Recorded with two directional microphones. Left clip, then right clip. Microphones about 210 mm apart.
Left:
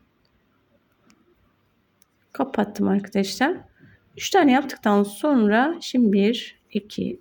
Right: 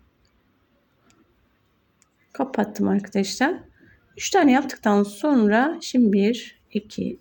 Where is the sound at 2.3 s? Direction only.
10° left (ahead or behind).